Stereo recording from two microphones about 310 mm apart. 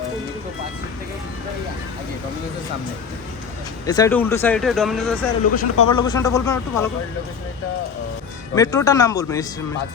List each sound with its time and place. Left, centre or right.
3.8 s speech: centre
5.7 s speech: left
6.0 s a man's voice: centre
8.5 s a man's voice: centre